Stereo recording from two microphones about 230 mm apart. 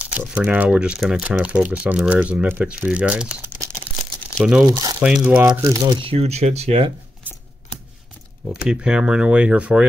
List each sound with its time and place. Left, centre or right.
0.0 s speech: centre
4.6 s speech: centre
5.0 s speech: centre
5.5 s speech: centre
8.6 s speech: centre